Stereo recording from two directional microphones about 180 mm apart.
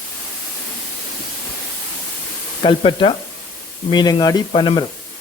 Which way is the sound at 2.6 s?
25° left (ahead or behind).